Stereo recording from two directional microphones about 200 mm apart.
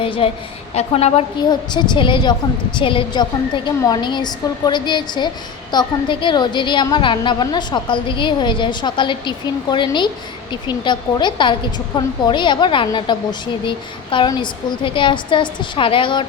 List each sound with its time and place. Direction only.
0.0 s a woman's voice: 30° left (ahead or behind)